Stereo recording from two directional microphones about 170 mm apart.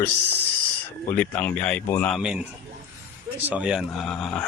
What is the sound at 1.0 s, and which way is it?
Speech, 10° left (ahead or behind).